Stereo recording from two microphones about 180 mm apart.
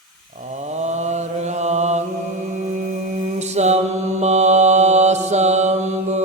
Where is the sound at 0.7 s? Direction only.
40° right (ahead or behind).